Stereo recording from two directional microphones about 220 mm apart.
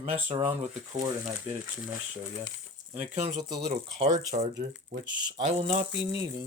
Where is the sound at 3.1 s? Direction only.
30° right (ahead or behind).